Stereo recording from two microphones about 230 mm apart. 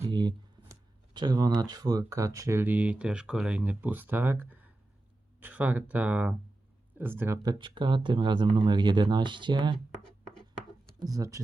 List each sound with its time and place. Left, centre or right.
0.0 s speech: centre
10.0 s writing: centre
11.0 s speech: centre